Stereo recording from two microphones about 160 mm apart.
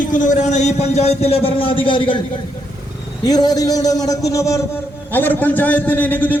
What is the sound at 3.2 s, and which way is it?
A man's voice, 25° left (ahead or behind).